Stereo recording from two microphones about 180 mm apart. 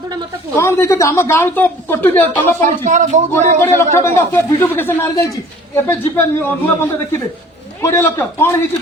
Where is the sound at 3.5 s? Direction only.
10° left (ahead or behind).